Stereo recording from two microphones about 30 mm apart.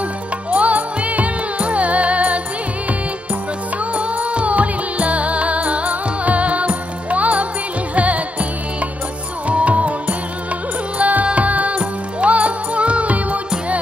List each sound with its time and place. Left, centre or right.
0.5 s music: right
3.9 s music: right
9.5 s music: right
11.0 s music: right